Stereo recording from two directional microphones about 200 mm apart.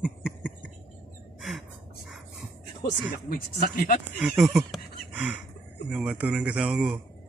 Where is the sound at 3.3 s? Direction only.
45° left (ahead or behind).